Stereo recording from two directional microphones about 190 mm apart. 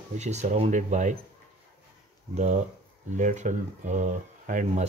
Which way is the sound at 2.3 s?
40° right (ahead or behind).